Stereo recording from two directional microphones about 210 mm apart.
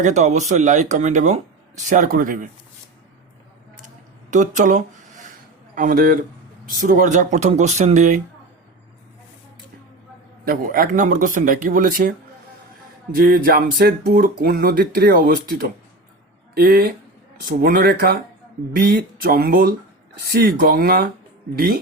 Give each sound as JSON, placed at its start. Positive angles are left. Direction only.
{"t": 0.0, "sound": "speech", "side_deg": -35}
{"t": 4.3, "sound": "speech", "side_deg": -35}
{"t": 10.4, "sound": "speech", "side_deg": -45}
{"t": 13.1, "sound": "speech", "side_deg": -45}